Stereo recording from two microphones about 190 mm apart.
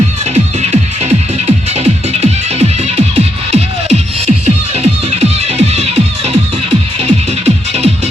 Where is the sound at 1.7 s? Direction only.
35° right (ahead or behind).